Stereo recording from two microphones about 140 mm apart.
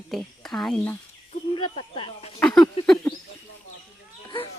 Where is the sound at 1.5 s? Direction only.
40° left (ahead or behind).